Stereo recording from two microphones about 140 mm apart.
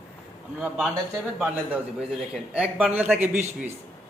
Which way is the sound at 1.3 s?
10° right (ahead or behind).